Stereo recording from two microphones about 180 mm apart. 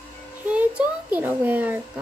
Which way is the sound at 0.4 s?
5° right (ahead or behind).